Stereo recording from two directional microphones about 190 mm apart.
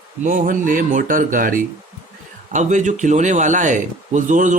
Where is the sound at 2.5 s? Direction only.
40° right (ahead or behind).